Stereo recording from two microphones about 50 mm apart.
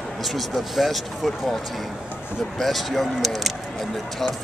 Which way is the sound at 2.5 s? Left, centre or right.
Centre.